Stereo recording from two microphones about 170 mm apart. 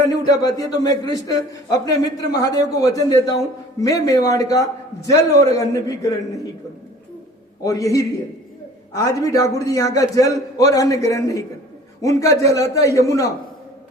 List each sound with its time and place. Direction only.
0.3 s a man's voice: 20° left (ahead or behind)
7.6 s a man's voice: 20° left (ahead or behind)